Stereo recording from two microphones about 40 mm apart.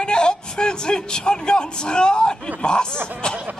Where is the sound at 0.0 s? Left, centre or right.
Left.